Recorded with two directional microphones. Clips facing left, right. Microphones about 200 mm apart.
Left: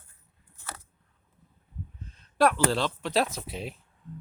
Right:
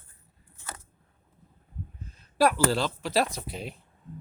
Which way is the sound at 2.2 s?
5° right (ahead or behind).